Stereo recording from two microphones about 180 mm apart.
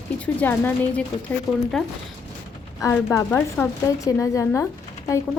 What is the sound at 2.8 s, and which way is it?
A woman's voice, 15° left (ahead or behind).